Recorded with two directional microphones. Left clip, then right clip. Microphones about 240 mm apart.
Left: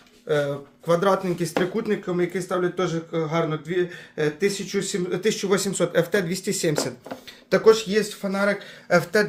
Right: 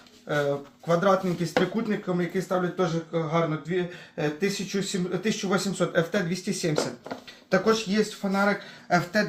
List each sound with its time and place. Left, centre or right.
0.9 s speech: left